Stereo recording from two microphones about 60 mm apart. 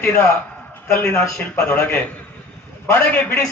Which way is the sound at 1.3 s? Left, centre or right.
Left.